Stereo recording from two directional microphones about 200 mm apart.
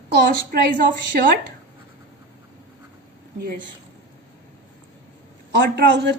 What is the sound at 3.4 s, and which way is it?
Speech, 45° right (ahead or behind).